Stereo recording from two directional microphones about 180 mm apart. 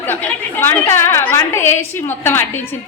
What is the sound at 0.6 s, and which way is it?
A woman's voice, 10° left (ahead or behind).